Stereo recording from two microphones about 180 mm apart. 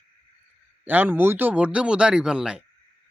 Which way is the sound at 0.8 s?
10° right (ahead or behind).